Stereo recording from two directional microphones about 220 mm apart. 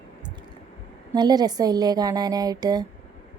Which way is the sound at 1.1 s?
20° right (ahead or behind).